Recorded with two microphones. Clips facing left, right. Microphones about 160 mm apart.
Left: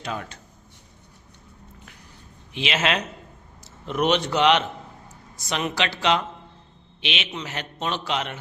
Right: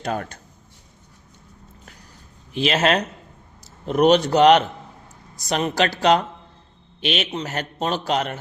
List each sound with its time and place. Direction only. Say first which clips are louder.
0.0 s a man's voice: right 5 dB; 45° right (ahead or behind)
2.5 s a woman's voice: right 5 dB; 40° right (ahead or behind)